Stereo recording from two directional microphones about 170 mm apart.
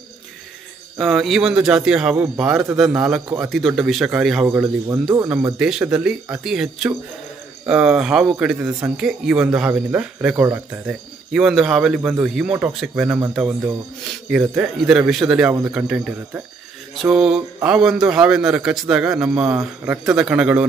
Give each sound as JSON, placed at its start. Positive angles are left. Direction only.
{"t": 0.9, "sound": "speech", "side_deg": 0}
{"t": 4.5, "sound": "speech", "side_deg": -15}
{"t": 5.6, "sound": "speech", "side_deg": -5}
{"t": 14.3, "sound": "speech", "side_deg": -5}